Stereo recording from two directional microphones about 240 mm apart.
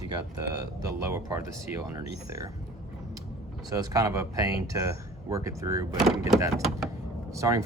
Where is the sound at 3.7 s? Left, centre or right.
Centre.